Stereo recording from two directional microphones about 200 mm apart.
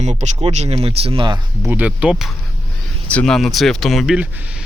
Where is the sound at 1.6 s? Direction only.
10° right (ahead or behind).